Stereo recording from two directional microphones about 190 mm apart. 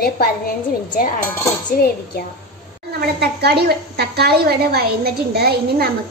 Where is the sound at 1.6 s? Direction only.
55° left (ahead or behind).